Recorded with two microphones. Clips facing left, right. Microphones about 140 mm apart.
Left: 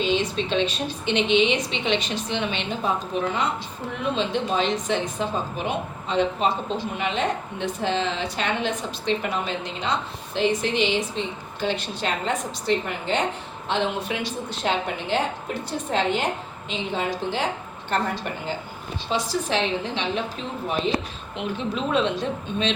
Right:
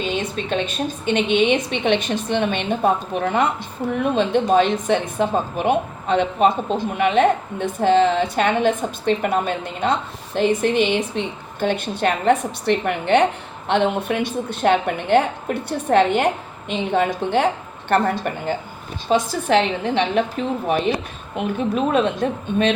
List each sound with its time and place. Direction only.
0.0 s a woman's voice: 50° right (ahead or behind)